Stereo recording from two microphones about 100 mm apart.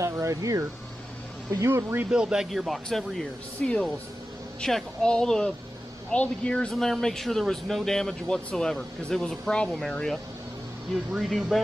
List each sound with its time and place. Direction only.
0.0 s a sound: 30° right (ahead or behind)
1.5 s speech: 30° right (ahead or behind)
2.0 s speech: 10° right (ahead or behind)